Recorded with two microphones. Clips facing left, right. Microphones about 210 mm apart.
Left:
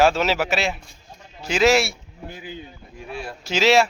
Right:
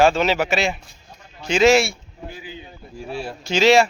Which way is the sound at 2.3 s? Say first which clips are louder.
Left 3 dB; 50° left (ahead or behind).